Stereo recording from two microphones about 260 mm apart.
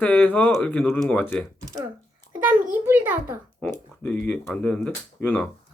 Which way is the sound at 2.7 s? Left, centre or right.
Centre.